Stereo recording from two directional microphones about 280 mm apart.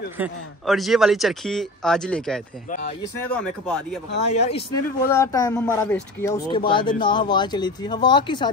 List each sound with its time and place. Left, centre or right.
0.2 s speech: centre
4.2 s speech: left
5.0 s speech: centre